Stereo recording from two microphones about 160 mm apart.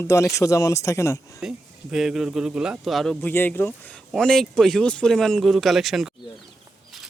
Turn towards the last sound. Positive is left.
turn(degrees=0)  # may be behind; listen again after turning